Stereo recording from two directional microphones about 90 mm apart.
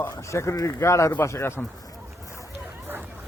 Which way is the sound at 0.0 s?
30° left (ahead or behind).